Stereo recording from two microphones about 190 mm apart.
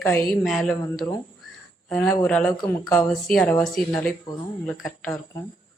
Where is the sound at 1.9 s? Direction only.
10° left (ahead or behind).